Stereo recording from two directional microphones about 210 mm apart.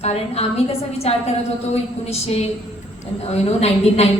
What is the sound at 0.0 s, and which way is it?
A woman's voice, 30° left (ahead or behind).